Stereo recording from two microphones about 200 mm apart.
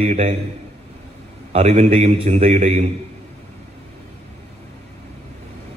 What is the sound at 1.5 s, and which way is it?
A man's voice, 35° right (ahead or behind).